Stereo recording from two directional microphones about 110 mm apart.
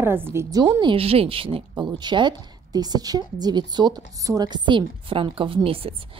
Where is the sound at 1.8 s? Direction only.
45° right (ahead or behind).